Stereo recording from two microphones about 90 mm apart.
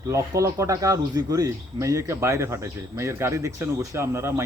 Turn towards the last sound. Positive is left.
turn(degrees=-30)  # may be behind; listen again after turning